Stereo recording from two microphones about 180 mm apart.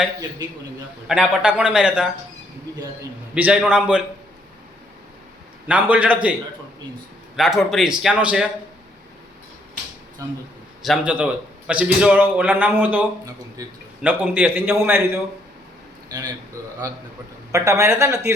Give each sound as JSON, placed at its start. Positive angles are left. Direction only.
{"t": 1.0, "sound": "speech", "side_deg": -5}
{"t": 3.3, "sound": "a man's voice", "side_deg": -10}
{"t": 5.6, "sound": "a man's voice", "side_deg": -10}
{"t": 7.3, "sound": "speech", "side_deg": 0}
{"t": 10.8, "sound": "a man's voice", "side_deg": -5}